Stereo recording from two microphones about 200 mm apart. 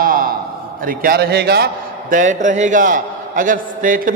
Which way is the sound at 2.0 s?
40° right (ahead or behind).